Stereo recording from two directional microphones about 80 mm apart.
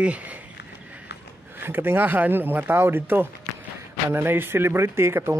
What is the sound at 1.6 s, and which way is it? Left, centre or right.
Speech, right.